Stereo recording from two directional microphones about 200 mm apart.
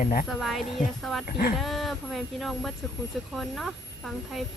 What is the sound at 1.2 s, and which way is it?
Speech, 45° left (ahead or behind).